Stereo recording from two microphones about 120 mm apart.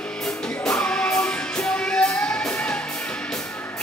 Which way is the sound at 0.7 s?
10° left (ahead or behind).